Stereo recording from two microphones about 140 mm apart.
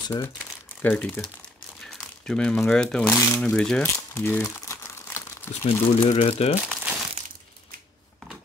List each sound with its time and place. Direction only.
0.8 s speech: 10° left (ahead or behind)
4.6 s crumpling: 20° left (ahead or behind)
5.7 s speech: 45° left (ahead or behind)
6.5 s crumpling: 10° right (ahead or behind)